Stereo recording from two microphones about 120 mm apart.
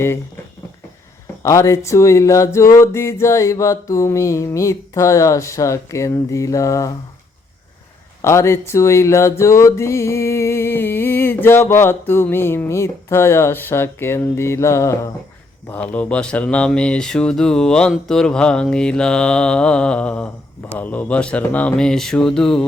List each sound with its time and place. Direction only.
1.4 s speech: 25° left (ahead or behind)
8.2 s speech: 25° left (ahead or behind)
15.7 s mantra: 15° left (ahead or behind)